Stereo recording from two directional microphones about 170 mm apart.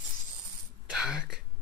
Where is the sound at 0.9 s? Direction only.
5° right (ahead or behind).